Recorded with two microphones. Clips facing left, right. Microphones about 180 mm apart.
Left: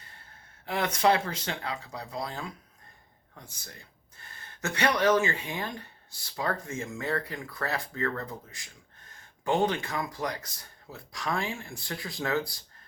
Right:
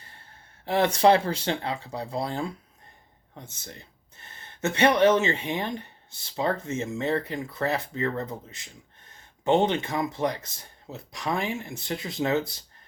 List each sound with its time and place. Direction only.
0.6 s speech: 30° right (ahead or behind)